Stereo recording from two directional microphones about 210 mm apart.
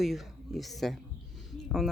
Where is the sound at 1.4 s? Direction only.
Centre (ahead or behind).